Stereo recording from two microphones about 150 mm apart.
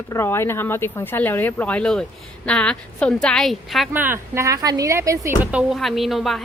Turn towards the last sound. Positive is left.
turn(degrees=0)  # may be behind; listen again after turning